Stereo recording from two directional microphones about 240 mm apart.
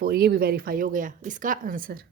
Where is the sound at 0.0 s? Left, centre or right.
Right.